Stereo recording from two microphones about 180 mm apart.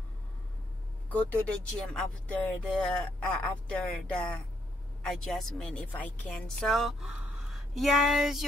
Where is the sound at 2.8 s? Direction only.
5° left (ahead or behind).